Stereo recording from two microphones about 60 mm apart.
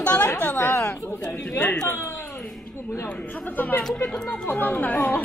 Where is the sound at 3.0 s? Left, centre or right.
Left.